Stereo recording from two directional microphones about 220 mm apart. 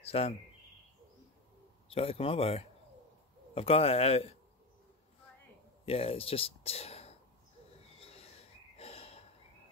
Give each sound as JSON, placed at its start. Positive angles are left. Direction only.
{"t": 0.1, "sound": "speech", "side_deg": 25}
{"t": 1.9, "sound": "speech", "side_deg": 25}
{"t": 5.9, "sound": "speech", "side_deg": 25}
{"t": 8.0, "sound": "owl", "side_deg": 25}
{"t": 8.7, "sound": "snort", "side_deg": 30}